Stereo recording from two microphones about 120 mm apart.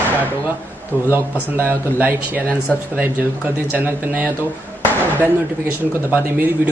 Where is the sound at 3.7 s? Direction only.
15° right (ahead or behind).